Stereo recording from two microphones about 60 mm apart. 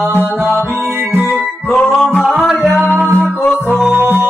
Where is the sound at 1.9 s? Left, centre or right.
Centre.